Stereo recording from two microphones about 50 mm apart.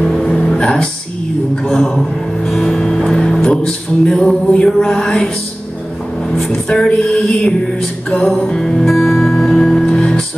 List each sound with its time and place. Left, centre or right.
0.0 s music: centre
1.5 s music: centre
6.3 s music: centre